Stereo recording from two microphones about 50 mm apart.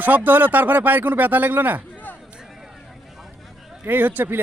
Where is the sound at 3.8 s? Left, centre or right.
Right.